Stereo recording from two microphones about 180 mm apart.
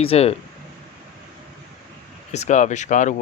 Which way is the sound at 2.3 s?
40° left (ahead or behind).